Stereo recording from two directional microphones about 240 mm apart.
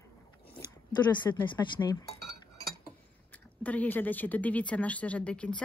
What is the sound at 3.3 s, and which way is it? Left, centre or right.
Speech, centre.